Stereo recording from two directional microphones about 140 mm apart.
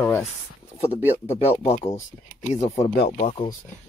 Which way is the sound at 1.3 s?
45° left (ahead or behind).